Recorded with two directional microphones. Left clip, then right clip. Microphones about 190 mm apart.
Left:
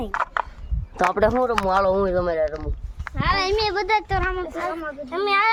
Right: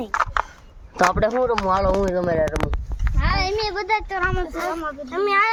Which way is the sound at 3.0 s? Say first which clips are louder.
Left 2 dB; 60° left (ahead or behind).